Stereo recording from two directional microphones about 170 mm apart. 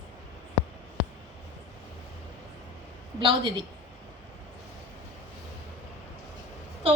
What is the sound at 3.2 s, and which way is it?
Speech, 30° right (ahead or behind).